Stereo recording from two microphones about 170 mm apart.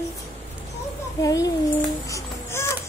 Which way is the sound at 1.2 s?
20° left (ahead or behind).